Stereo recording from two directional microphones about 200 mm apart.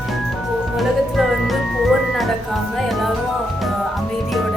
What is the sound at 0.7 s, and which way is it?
Music, centre (ahead or behind).